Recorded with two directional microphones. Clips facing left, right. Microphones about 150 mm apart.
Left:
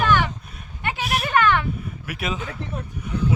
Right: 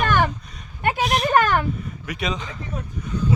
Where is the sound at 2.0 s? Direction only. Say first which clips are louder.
Right 1 dB; 5° left (ahead or behind).